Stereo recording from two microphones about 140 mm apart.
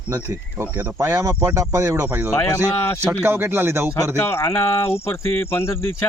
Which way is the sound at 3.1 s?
15° right (ahead or behind).